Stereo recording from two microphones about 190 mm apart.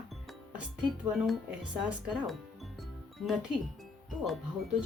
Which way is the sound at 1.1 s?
Centre (ahead or behind).